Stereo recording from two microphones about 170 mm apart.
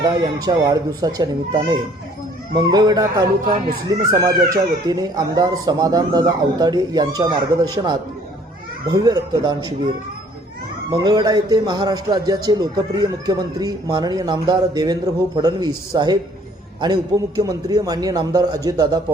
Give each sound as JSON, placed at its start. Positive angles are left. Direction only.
{"t": 0.0, "sound": "speech", "side_deg": -25}
{"t": 10.9, "sound": "speech", "side_deg": -25}